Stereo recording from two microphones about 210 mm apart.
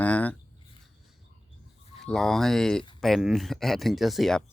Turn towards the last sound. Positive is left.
turn(degrees=0)  # may be behind; listen again after turning